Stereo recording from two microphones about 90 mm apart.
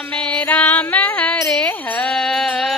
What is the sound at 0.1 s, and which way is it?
Music, 15° left (ahead or behind).